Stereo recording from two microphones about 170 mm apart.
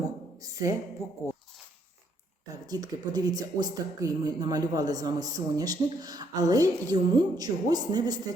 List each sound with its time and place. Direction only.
0.4 s a woman's voice: 20° right (ahead or behind)
2.6 s speech: 20° right (ahead or behind)